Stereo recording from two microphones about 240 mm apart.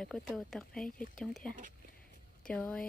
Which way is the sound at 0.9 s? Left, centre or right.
Left.